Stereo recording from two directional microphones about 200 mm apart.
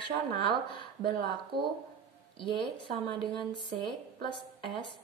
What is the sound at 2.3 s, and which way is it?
Speech, 25° left (ahead or behind).